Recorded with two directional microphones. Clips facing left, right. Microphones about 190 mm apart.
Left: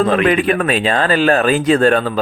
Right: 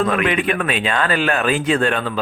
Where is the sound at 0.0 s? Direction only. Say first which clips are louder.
Left 5 dB; 30° left (ahead or behind).